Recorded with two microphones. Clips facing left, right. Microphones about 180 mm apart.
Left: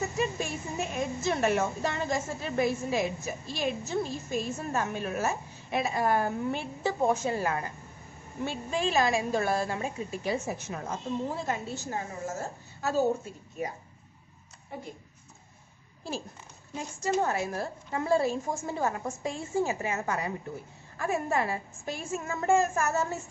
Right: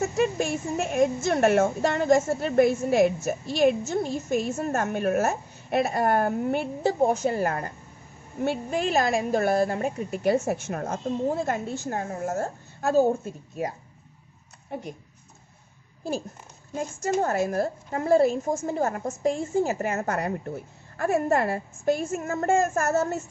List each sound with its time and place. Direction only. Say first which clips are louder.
0.0 s a woman's voice: right 6 dB; 70° right (ahead or behind)
1.2 s a woman's voice: right 2 dB; 55° right (ahead or behind)
4.6 s a woman's voice: right 5 dB; 45° right (ahead or behind)
4.9 s a woman's voice: right 7 dB; 60° right (ahead or behind)
6.9 s a woman's voice: right 4 dB; 40° right (ahead or behind)
14.7 s speech: right 6 dB; 70° right (ahead or behind)
16.7 s a woman's voice: right 3 dB; 45° right (ahead or behind)